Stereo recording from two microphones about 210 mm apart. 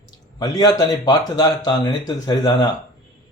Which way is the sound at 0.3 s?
20° left (ahead or behind).